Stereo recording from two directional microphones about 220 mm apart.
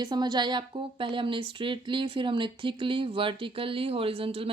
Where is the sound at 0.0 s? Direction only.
20° right (ahead or behind).